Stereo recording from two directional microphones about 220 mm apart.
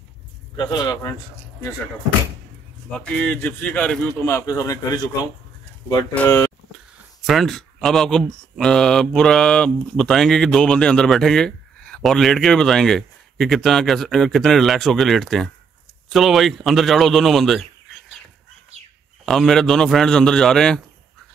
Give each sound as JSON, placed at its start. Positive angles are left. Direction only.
{"t": 0.6, "sound": "speech", "side_deg": 20}
{"t": 3.0, "sound": "a man's voice", "side_deg": 5}
{"t": 6.1, "sound": "a man's voice", "side_deg": 10}
{"t": 7.2, "sound": "speech", "side_deg": 0}
{"t": 19.2, "sound": "speech", "side_deg": 0}